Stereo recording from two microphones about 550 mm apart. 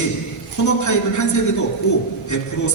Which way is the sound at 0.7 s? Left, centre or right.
Left.